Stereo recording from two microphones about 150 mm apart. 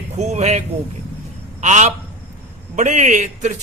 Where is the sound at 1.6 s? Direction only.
50° right (ahead or behind).